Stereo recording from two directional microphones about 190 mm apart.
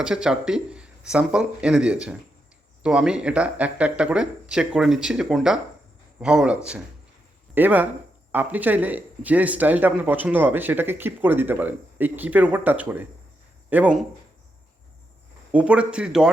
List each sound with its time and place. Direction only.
0.0 s speech: 5° right (ahead or behind)
15.5 s speech: 5° right (ahead or behind)